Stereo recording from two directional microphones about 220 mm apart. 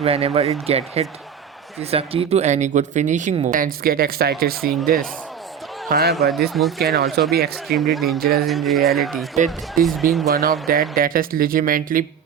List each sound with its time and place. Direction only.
0.0 s speech: 25° right (ahead or behind); by 6.1 s 45° right (ahead or behind)
6.5 s speech: centre (ahead or behind)
6.8 s speech: 45° right (ahead or behind)
7.8 s speech: centre (ahead or behind)
8.2 s speech: 45° right (ahead or behind)
8.4 s speech: centre (ahead or behind)
9.3 s speech: 35° right (ahead or behind)
9.8 s speech: centre (ahead or behind)
10.7 s speech: 40° right (ahead or behind)